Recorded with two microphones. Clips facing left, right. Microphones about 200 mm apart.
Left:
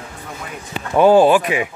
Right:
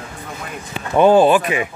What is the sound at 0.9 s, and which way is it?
Speech, 10° left (ahead or behind).